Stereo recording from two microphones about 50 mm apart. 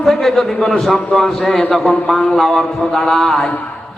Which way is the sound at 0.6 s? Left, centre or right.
Centre.